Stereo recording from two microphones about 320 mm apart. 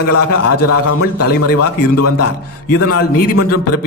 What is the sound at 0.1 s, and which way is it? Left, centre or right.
A man's voice, left.